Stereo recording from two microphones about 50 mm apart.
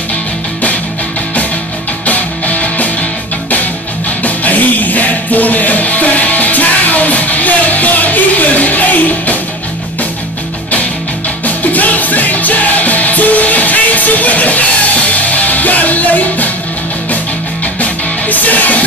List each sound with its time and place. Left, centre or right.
2.0 s music: left
11.4 s music: left
17.7 s music: left